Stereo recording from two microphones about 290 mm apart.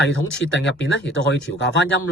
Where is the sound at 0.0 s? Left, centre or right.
Left.